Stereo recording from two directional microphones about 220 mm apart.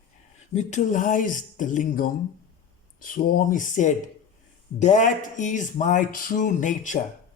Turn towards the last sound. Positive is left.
turn(degrees=35)  # may be behind; listen again after turning